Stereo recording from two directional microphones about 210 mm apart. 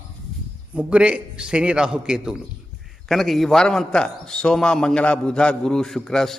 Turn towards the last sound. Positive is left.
turn(degrees=0)  # may be behind; listen again after turning